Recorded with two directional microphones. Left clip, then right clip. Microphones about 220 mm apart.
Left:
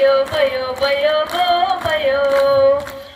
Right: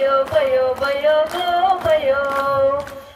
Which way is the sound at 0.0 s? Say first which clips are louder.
Left 2 dB; 50° right (ahead or behind).